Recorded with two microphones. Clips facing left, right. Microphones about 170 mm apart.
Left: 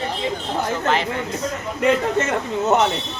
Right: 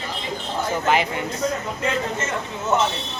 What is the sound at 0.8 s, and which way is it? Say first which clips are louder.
Speech: even; 10° right (ahead or behind).